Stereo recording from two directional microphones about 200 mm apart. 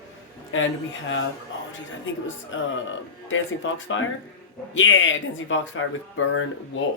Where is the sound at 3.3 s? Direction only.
75° left (ahead or behind).